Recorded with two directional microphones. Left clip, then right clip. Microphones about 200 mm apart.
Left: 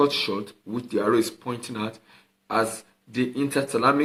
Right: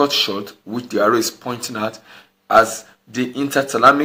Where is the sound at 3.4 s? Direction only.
Centre (ahead or behind).